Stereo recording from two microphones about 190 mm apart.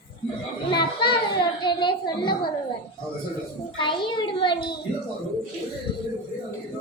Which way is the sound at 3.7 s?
25° left (ahead or behind).